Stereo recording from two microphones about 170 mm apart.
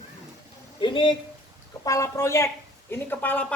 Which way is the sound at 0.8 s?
30° left (ahead or behind).